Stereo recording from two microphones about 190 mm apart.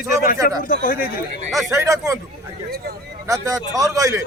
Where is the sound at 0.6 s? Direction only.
45° left (ahead or behind).